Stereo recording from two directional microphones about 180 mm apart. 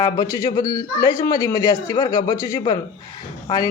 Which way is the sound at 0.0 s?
20° left (ahead or behind).